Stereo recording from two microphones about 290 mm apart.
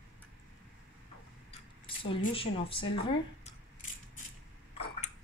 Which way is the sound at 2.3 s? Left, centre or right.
Centre.